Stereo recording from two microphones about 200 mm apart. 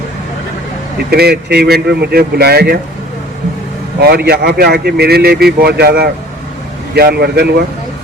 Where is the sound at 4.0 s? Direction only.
50° right (ahead or behind).